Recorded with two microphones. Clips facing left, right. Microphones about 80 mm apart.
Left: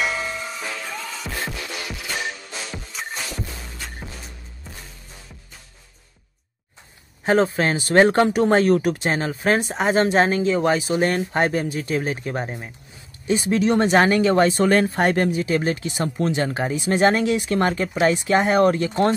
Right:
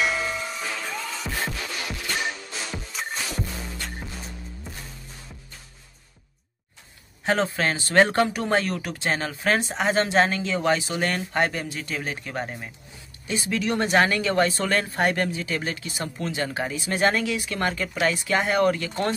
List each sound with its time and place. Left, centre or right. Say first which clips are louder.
0.9 s music: even; centre
7.2 s speech: left 5 dB; left
13.3 s speech: left 7 dB; left